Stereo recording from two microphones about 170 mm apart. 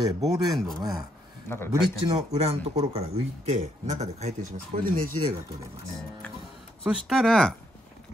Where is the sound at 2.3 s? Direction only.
40° right (ahead or behind).